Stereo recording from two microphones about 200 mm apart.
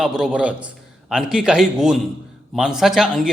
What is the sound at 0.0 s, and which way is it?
A man's voice, 5° right (ahead or behind).